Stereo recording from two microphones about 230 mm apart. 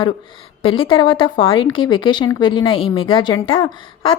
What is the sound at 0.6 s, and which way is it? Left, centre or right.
Speech, left.